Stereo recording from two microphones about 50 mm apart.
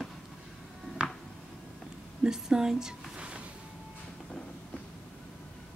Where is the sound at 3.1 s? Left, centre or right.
Right.